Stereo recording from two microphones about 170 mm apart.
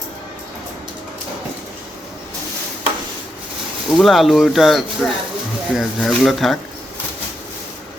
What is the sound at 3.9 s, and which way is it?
Speech, centre (ahead or behind).